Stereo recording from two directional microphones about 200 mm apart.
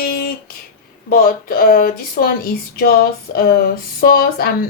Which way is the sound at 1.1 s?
45° left (ahead or behind).